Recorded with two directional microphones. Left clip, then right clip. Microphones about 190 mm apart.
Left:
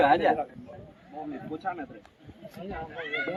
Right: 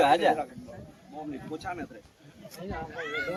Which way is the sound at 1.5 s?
25° left (ahead or behind).